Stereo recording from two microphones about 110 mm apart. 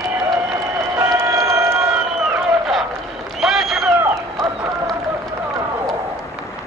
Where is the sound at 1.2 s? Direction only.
30° right (ahead or behind).